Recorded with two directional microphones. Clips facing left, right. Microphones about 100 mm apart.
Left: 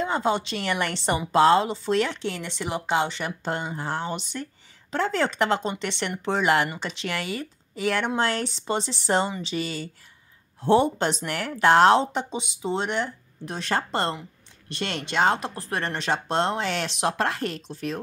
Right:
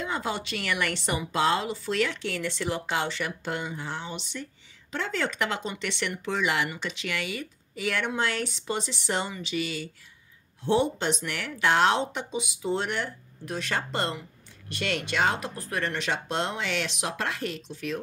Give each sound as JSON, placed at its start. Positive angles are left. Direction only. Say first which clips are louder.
{"t": 0.0, "sound": "a woman's voice", "louder": "left 6 dB", "side_deg": 30}
{"t": 6.7, "sound": "speech", "louder": "left 2 dB", "side_deg": 35}